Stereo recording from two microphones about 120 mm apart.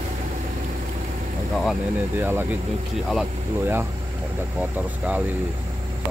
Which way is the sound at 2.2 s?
20° right (ahead or behind).